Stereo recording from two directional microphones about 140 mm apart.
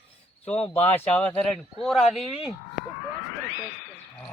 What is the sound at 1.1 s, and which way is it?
Speech, 10° left (ahead or behind).